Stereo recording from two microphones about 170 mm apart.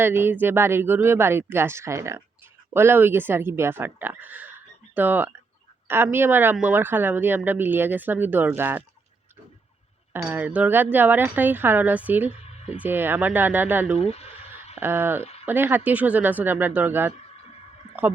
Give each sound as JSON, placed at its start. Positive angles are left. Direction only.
{"t": 0.0, "sound": "speech", "side_deg": -15}
{"t": 10.1, "sound": "speech", "side_deg": -10}
{"t": 14.0, "sound": "a sound", "side_deg": 35}
{"t": 14.8, "sound": "speech", "side_deg": -10}
{"t": 15.2, "sound": "a sound", "side_deg": 40}
{"t": 15.4, "sound": "speech", "side_deg": -10}